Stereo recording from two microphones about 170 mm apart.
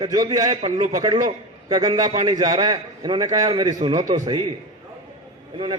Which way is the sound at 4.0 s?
45° right (ahead or behind).